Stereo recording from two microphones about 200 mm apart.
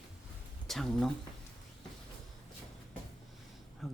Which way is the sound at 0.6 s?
Centre (ahead or behind).